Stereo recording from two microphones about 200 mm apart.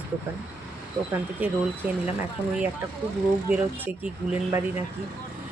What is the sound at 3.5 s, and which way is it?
Speech, 10° right (ahead or behind).